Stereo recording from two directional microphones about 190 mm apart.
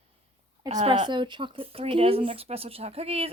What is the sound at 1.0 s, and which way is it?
Speech, 25° right (ahead or behind).